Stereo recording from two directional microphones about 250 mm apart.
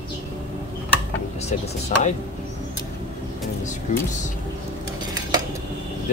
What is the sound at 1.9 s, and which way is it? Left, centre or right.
Speech, left.